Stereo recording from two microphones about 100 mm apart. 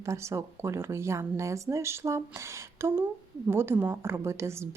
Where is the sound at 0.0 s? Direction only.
30° right (ahead or behind).